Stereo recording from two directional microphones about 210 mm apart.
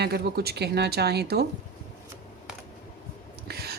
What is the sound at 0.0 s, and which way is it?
Speech, 50° right (ahead or behind).